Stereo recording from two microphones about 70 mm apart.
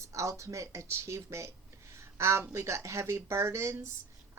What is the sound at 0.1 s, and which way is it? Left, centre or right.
A woman's voice, right.